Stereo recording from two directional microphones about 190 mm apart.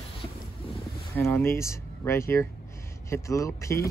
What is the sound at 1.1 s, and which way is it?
Speech, 10° left (ahead or behind).